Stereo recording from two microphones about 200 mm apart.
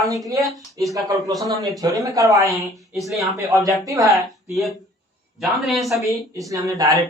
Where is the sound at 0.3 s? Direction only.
Centre (ahead or behind).